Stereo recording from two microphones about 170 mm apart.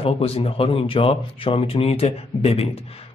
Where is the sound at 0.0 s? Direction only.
35° left (ahead or behind).